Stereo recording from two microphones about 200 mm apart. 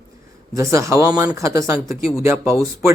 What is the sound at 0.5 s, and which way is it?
Speech, 15° right (ahead or behind).